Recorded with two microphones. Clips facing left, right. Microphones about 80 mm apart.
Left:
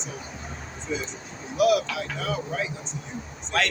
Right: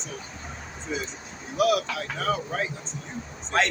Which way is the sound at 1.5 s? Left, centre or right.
Right.